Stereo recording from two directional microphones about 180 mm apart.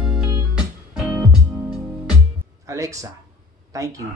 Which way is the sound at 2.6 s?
20° right (ahead or behind).